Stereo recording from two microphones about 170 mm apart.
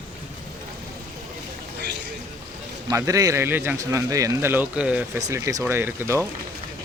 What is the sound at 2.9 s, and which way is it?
A man's voice, 20° right (ahead or behind).